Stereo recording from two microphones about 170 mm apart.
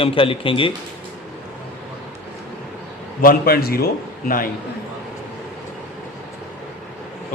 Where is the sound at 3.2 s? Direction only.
60° left (ahead or behind).